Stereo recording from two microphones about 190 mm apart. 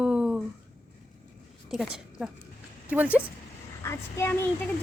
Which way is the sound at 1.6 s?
Centre (ahead or behind).